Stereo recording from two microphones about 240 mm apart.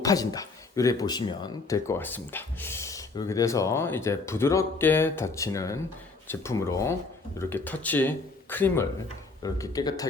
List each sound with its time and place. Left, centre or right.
0.0 s speech: centre